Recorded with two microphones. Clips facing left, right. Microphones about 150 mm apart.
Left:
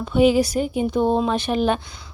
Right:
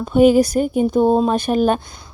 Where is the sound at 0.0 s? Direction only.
45° right (ahead or behind).